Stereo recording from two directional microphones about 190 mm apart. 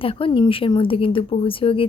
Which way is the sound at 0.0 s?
30° left (ahead or behind).